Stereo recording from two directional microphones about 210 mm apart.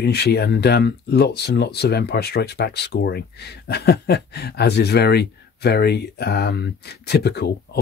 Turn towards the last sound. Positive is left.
turn(degrees=50)  # may be behind; listen again after turning